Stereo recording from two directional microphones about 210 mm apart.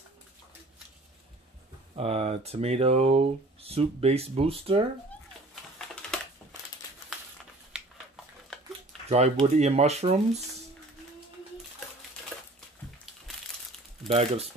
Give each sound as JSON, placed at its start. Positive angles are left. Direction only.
{"t": 2.0, "sound": "speech", "side_deg": -30}
{"t": 7.7, "sound": "a sound", "side_deg": -5}
{"t": 9.1, "sound": "speech", "side_deg": -30}
{"t": 14.0, "sound": "speech", "side_deg": -30}